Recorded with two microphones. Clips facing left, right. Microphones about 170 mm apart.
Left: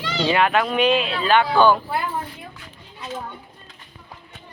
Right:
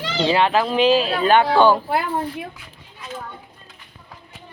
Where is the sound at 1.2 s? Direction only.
45° right (ahead or behind).